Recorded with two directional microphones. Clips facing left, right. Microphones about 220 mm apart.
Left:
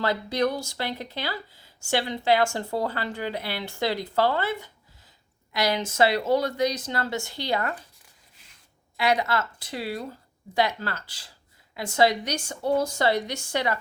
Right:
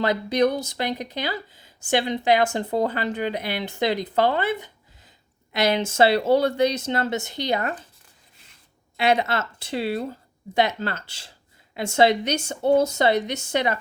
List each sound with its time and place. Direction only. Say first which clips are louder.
0.0 s speech: right 4 dB; 20° right (ahead or behind)
9.0 s speech: right 3 dB; 25° right (ahead or behind)